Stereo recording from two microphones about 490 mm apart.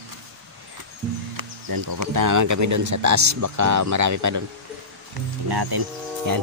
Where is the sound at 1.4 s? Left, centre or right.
Right.